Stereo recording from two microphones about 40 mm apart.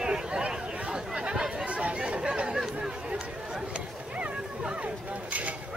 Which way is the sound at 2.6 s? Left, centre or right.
Centre.